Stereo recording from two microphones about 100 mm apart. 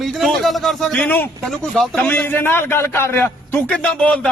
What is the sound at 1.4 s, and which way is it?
A man's voice, 5° left (ahead or behind).